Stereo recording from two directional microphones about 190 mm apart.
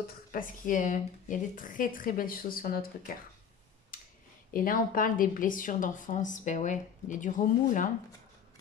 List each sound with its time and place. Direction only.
0.3 s speech: 45° left (ahead or behind)
3.9 s a sound: 45° left (ahead or behind)
4.6 s speech: 45° left (ahead or behind)